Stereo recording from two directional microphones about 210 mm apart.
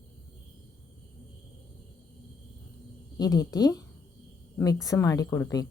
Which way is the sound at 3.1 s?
20° left (ahead or behind).